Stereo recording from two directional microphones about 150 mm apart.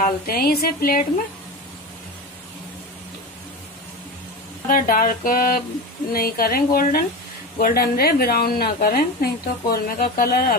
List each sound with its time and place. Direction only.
0.0 s a woman's voice: 80° left
4.6 s speech: 70° left (ahead or behind)
6.1 s a woman's voice: 85° left